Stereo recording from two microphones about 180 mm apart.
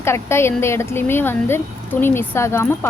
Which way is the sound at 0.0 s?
15° left (ahead or behind).